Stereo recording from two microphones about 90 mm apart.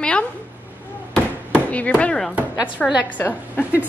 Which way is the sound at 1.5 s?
15° left (ahead or behind).